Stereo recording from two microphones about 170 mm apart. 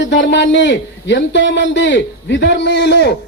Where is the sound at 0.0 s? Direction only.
90° left.